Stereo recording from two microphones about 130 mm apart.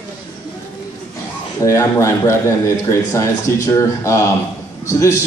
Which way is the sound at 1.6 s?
25° left (ahead or behind).